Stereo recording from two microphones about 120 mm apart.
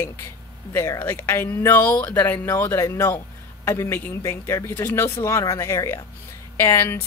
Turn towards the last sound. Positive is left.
turn(degrees=25)  # may be behind; listen again after turning